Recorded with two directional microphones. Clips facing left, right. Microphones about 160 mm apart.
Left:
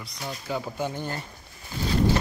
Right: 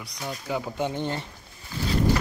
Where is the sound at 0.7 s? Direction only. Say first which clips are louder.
Right 3 dB; 20° right (ahead or behind).